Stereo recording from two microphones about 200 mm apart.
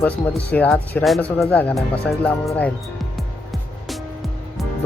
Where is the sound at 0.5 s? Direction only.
10° left (ahead or behind).